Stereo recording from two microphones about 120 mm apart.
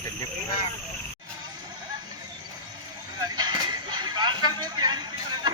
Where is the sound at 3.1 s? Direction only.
35° right (ahead or behind).